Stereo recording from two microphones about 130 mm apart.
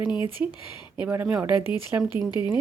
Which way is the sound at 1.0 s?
10° right (ahead or behind).